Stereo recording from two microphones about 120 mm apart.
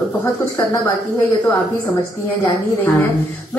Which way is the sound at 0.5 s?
25° left (ahead or behind).